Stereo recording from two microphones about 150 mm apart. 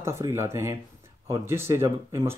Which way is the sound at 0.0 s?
20° right (ahead or behind).